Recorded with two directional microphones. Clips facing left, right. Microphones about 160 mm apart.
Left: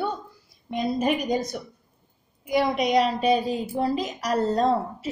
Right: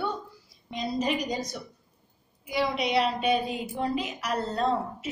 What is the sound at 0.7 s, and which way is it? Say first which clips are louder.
A woman's voice: left 4 dB; 55° left (ahead or behind).